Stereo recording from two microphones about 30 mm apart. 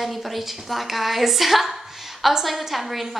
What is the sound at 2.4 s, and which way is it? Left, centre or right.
Speech, centre.